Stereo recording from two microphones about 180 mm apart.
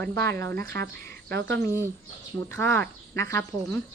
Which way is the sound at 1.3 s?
70° right (ahead or behind).